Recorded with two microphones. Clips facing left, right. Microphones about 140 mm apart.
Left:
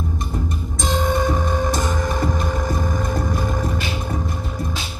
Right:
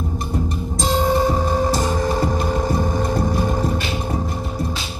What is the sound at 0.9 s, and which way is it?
Music, 30° right (ahead or behind).